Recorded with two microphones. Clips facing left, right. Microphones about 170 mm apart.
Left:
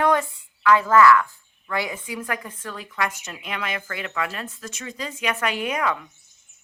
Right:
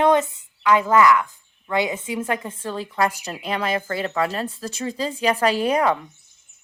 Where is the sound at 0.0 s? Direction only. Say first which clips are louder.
Right 3 dB; 20° right (ahead or behind).